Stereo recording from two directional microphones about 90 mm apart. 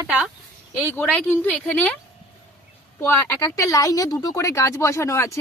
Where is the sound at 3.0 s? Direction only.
30° left (ahead or behind).